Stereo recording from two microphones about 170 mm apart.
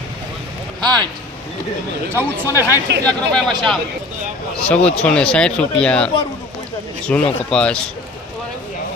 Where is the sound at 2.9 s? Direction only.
90° right.